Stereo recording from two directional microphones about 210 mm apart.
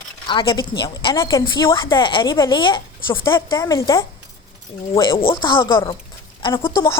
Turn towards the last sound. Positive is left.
turn(degrees=15)  # may be behind; listen again after turning